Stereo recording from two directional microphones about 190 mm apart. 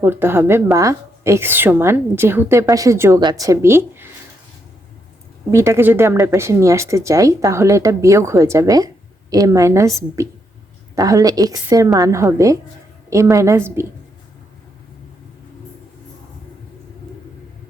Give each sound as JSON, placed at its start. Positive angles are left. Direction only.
{"t": 0.0, "sound": "a woman's voice", "side_deg": -10}
{"t": 5.5, "sound": "a woman's voice", "side_deg": -15}